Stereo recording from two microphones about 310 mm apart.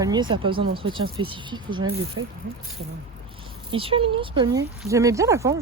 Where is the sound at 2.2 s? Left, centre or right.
Right.